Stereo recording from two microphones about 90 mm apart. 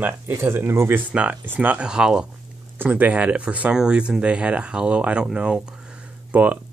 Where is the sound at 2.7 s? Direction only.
20° right (ahead or behind).